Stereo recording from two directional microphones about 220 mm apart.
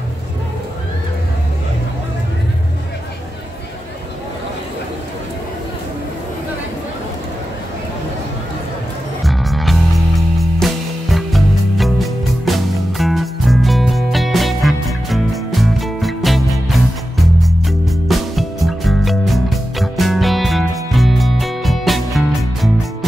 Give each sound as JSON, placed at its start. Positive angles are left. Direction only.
{"t": 9.2, "sound": "music", "side_deg": 0}